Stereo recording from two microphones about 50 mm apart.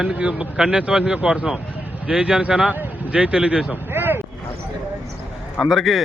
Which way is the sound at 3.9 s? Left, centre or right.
Right.